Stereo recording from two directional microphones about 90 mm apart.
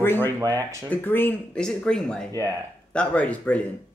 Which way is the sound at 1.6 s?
10° left (ahead or behind).